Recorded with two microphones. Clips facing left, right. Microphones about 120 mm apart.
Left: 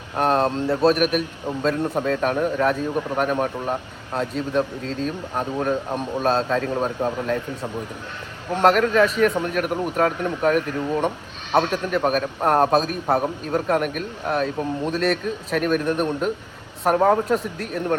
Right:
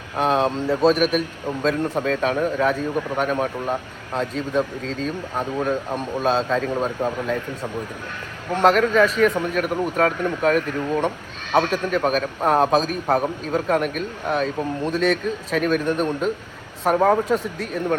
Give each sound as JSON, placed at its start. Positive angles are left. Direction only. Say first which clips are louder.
{"t": 0.3, "sound": "a man's voice", "louder": "even", "side_deg": -5}
{"t": 0.7, "sound": "a man's voice", "louder": "right 1 dB", "side_deg": 10}